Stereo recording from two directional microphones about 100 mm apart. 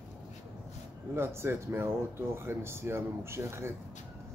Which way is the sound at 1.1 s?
25° right (ahead or behind).